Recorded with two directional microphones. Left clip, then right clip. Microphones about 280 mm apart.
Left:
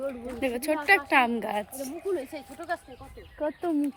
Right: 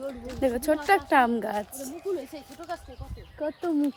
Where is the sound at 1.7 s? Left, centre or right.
Left.